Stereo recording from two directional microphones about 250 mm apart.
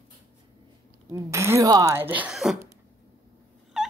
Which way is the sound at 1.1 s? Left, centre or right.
Centre.